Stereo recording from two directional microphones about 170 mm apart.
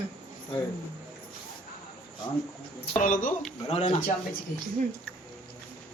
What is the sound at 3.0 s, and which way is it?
Speech, 55° left (ahead or behind).